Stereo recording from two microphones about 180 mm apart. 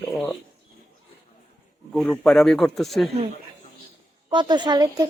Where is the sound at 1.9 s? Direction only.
Centre (ahead or behind).